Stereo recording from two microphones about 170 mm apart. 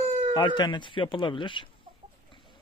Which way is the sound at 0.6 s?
25° left (ahead or behind).